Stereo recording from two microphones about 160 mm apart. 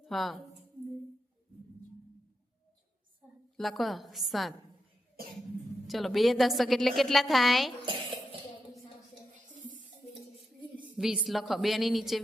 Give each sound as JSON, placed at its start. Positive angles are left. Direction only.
{"t": 0.0, "sound": "speech", "side_deg": 0}
{"t": 3.6, "sound": "a woman's voice", "side_deg": 0}
{"t": 5.9, "sound": "a woman's voice", "side_deg": 0}
{"t": 10.9, "sound": "a woman's voice", "side_deg": -5}